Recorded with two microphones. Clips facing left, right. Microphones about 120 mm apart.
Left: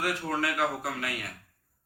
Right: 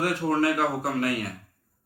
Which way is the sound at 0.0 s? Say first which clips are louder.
Right 6 dB; 40° right (ahead or behind).